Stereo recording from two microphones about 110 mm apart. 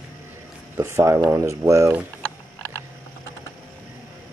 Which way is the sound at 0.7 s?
25° right (ahead or behind).